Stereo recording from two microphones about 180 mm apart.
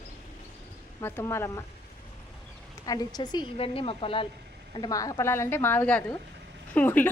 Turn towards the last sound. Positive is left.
turn(degrees=10)  # may be behind; listen again after turning